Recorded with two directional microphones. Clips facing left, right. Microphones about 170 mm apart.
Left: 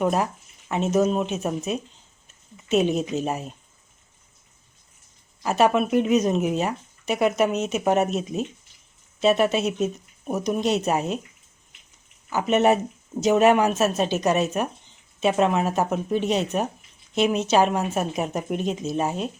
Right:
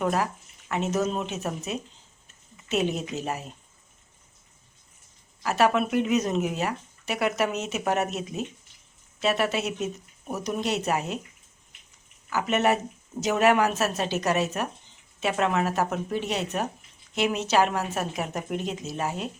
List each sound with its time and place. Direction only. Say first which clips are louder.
0.0 s speech: left 3 dB; 20° left (ahead or behind)
5.4 s speech: left 3 dB; 20° left (ahead or behind)
9.2 s speech: left 6 dB; 20° left (ahead or behind)
12.3 s speech: left 4 dB; 20° left (ahead or behind)